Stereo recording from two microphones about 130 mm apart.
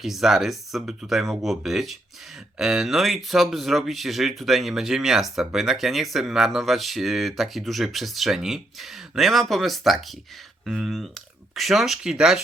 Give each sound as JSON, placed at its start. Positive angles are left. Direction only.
{"t": 0.0, "sound": "speech", "side_deg": 0}